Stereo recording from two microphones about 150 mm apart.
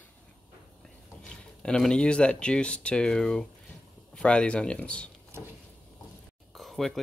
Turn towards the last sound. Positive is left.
turn(degrees=0)  # may be behind; listen again after turning